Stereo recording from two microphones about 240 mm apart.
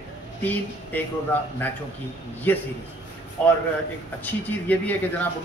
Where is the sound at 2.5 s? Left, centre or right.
Centre.